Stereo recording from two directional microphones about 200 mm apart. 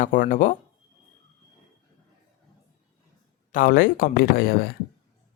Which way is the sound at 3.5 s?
45° left (ahead or behind).